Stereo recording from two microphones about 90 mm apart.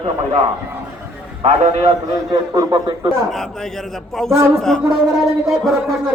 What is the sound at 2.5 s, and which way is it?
Speech, 50° right (ahead or behind).